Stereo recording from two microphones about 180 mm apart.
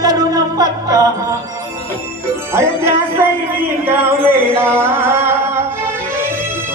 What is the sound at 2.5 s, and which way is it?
Speech, 15° right (ahead or behind).